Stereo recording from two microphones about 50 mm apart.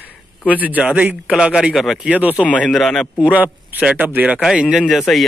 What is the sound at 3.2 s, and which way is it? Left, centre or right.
Speech, right.